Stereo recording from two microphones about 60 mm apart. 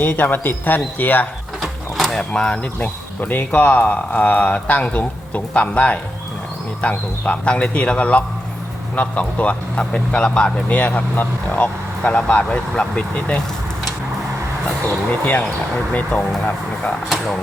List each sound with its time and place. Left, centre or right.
0.0 s speech: left
1.6 s mechanisms: centre
2.3 s speech: centre
2.7 s speech: left
15.2 s speech: left
17.1 s speech: centre